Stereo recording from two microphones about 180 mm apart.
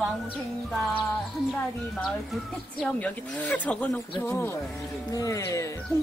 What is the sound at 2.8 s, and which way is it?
Speech, 5° left (ahead or behind).